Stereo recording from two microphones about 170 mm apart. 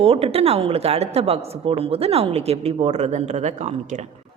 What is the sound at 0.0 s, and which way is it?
A woman's voice, 35° right (ahead or behind).